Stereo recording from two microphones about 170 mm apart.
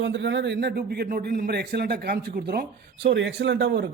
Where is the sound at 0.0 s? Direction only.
90° right.